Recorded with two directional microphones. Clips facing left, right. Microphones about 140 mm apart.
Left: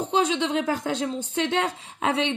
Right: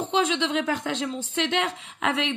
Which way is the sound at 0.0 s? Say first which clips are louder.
Left 1 dB; 35° left (ahead or behind).